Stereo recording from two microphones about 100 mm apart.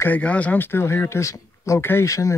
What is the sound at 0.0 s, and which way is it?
A woman's voice, 15° left (ahead or behind).